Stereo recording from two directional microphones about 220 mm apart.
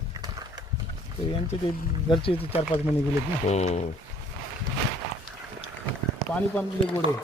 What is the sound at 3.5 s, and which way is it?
Speech, 30° left (ahead or behind).